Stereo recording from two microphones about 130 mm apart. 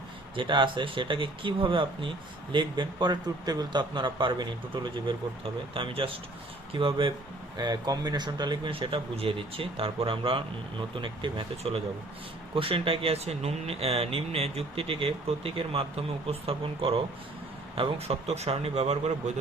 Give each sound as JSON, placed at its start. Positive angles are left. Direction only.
{"t": 0.3, "sound": "speech", "side_deg": -40}